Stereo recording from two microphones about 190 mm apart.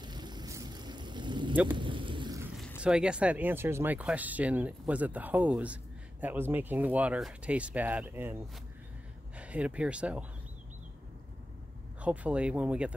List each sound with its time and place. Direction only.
0.0 s vehicle: 20° right (ahead or behind)
1.5 s speech: 10° right (ahead or behind)
1.8 s vehicle: 25° right (ahead or behind)
2.8 s speech: 5° right (ahead or behind)
9.4 s speech: 5° right (ahead or behind)
12.0 s speech: 5° right (ahead or behind)